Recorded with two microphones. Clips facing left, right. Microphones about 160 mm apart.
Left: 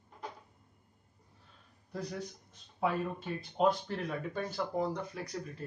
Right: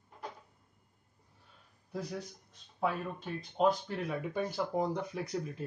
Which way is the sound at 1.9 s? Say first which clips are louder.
Even; 5° right (ahead or behind).